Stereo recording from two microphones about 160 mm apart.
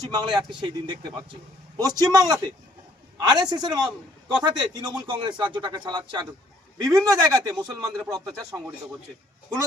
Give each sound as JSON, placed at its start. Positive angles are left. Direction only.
{"t": 0.1, "sound": "a man's voice", "side_deg": -25}